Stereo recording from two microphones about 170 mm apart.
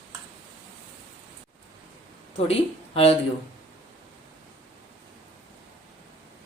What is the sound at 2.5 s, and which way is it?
Speech, 35° left (ahead or behind).